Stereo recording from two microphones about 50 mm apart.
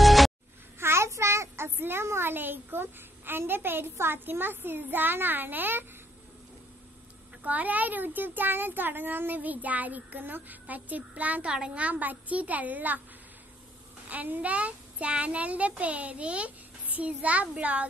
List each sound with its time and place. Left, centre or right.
0.0 s music: centre
0.7 s child singing: right
1.8 s a child's voice: right
7.4 s a child's voice: right
11.4 s a woman's voice: centre
11.7 s a child's voice: right
14.0 s a child's voice: right